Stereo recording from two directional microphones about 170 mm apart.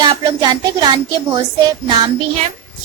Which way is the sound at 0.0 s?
25° right (ahead or behind).